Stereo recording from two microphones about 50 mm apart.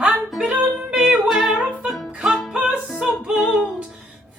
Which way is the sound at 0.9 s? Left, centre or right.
Centre.